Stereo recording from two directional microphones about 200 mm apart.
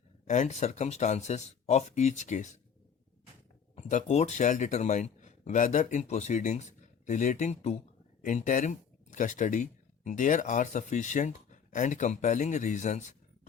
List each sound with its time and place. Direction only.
0.3 s a man's voice: 35° left (ahead or behind)
3.8 s a man's voice: 35° left (ahead or behind)